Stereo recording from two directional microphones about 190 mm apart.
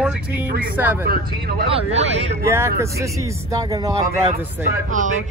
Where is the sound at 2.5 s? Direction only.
15° right (ahead or behind).